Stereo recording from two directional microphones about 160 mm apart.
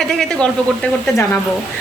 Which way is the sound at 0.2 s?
5° left (ahead or behind).